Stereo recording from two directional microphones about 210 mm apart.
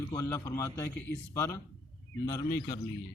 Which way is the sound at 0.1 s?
15° left (ahead or behind).